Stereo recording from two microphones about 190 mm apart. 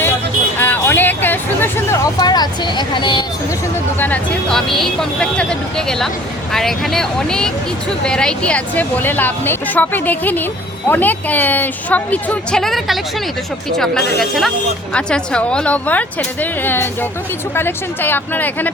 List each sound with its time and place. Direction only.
0.6 s hubbub: 10° left (ahead or behind)
4.0 s speech: 5° left (ahead or behind)